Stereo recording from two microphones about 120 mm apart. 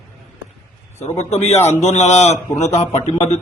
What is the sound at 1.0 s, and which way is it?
A man's voice, 65° left (ahead or behind).